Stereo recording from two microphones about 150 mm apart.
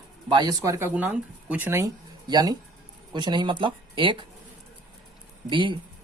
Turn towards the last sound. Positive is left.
turn(degrees=-35)  # may be behind; listen again after turning